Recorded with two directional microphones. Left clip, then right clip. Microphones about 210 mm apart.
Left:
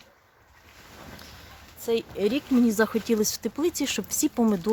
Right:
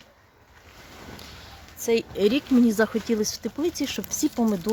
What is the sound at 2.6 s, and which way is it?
Speech, 10° left (ahead or behind).